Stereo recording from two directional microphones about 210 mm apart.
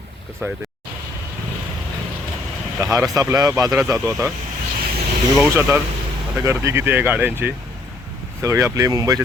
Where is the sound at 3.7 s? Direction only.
Centre (ahead or behind).